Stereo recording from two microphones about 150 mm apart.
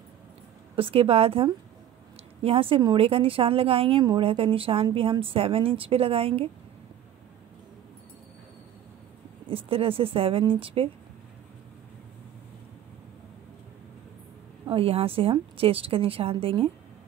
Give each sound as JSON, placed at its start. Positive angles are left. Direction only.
{"t": 0.7, "sound": "a woman's voice", "side_deg": -40}
{"t": 4.0, "sound": "speech", "side_deg": -25}
{"t": 4.3, "sound": "a woman's voice", "side_deg": -40}
{"t": 9.5, "sound": "a woman's voice", "side_deg": -40}
{"t": 14.7, "sound": "a woman's voice", "side_deg": -40}